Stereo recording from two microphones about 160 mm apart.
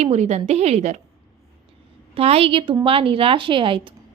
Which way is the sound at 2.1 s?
40° right (ahead or behind).